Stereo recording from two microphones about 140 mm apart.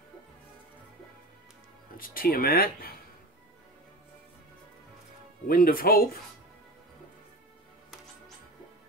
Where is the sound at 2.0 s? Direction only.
90° left.